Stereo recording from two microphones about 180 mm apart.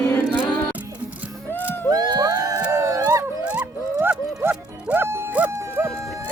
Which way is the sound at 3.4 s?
5° right (ahead or behind).